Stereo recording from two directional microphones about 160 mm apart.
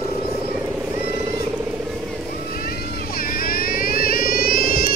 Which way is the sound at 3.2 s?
65° left (ahead or behind).